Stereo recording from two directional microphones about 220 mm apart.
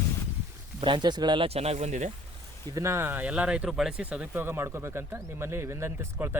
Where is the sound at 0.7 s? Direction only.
20° right (ahead or behind).